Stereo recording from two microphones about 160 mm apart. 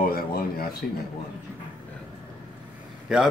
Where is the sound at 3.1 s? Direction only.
5° right (ahead or behind).